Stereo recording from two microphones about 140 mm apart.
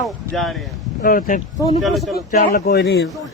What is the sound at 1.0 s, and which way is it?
Speech, 85° left.